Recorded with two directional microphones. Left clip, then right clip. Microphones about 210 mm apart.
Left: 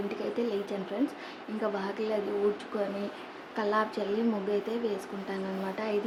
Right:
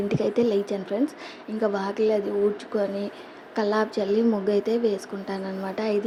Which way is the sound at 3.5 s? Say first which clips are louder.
Right 5 dB; 25° right (ahead or behind).